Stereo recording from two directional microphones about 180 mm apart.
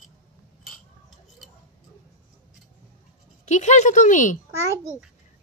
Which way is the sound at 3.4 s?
40° left (ahead or behind).